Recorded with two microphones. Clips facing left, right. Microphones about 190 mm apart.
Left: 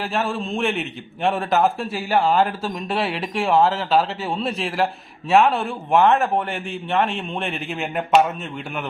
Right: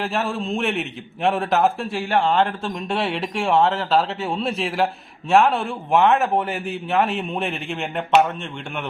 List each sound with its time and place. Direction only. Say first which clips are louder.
0.0 s a man's voice: even; centre (ahead or behind)